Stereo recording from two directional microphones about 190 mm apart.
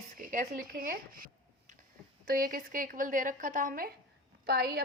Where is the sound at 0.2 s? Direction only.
45° right (ahead or behind).